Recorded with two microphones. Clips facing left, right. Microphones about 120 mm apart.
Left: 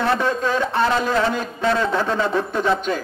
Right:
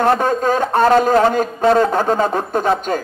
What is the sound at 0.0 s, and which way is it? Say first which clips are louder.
A man's voice: right 5 dB; 45° right (ahead or behind).